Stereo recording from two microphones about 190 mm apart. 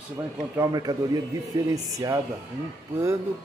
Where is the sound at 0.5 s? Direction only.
20° right (ahead or behind).